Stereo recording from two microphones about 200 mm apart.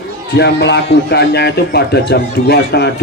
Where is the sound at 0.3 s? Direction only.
60° left (ahead or behind).